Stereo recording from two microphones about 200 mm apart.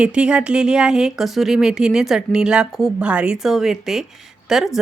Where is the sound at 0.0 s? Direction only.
5° right (ahead or behind).